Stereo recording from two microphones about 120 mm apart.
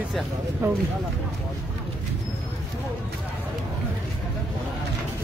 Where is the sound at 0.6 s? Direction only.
20° right (ahead or behind).